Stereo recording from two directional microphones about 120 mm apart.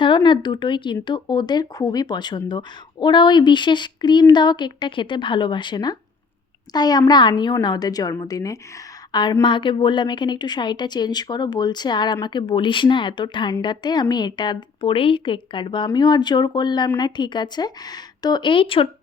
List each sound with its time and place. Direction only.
0.0 s a woman's voice: 40° left (ahead or behind)